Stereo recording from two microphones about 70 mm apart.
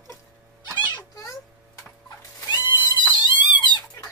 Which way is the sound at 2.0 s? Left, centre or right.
Left.